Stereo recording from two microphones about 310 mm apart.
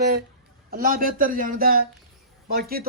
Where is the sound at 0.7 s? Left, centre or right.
Right.